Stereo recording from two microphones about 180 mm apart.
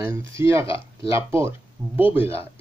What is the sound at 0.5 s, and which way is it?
Speech, 15° right (ahead or behind).